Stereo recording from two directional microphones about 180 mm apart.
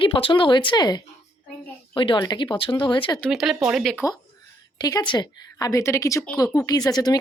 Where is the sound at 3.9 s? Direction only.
20° left (ahead or behind).